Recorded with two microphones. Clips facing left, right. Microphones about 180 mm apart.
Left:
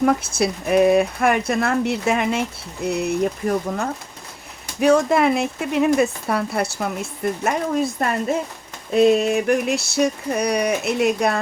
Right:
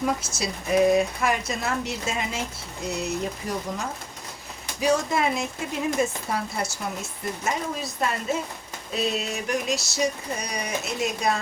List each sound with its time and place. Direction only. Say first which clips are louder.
0.0 s speech: left 8 dB; 60° left (ahead or behind)